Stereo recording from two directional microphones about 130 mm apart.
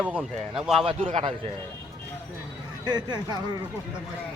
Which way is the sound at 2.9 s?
35° right (ahead or behind).